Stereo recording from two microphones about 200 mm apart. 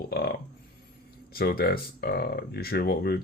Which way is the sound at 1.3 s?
50° left (ahead or behind).